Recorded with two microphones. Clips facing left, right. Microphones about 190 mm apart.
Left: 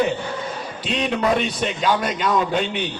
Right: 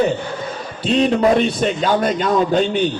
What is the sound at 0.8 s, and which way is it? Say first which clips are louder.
A man's voice: right 7 dB; 40° right (ahead or behind).